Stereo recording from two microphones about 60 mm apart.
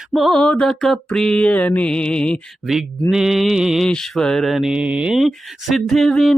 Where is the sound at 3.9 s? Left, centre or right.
Centre.